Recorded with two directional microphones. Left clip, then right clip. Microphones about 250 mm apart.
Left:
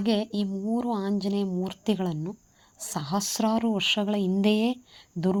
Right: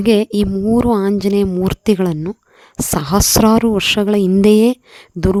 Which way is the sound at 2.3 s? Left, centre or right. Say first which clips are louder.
Right 13 dB; right.